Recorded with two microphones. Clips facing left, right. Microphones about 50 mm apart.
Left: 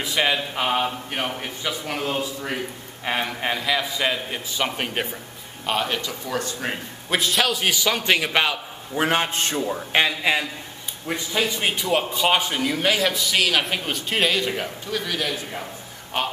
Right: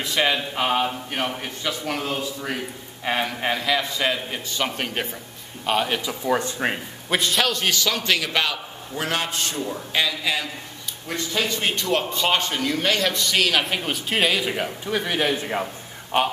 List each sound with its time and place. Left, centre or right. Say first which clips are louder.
0.0 s a man's voice: even; centre
5.7 s a man's voice: right 2 dB; centre
6.3 s a man's voice: right 4 dB; right
7.1 s a man's voice: even; centre; by 10.4 s left
11.1 s a man's voice: left 1 dB; centre
14.9 s a man's voice: right 4 dB; right